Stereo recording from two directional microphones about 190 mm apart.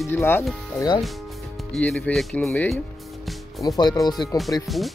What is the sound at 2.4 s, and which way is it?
Music, 10° left (ahead or behind).